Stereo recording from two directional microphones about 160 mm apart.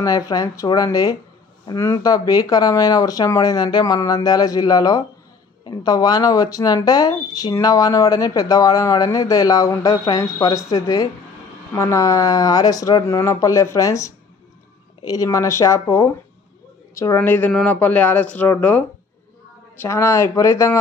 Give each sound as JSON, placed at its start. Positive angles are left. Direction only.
{"t": 0.0, "sound": "speech", "side_deg": 20}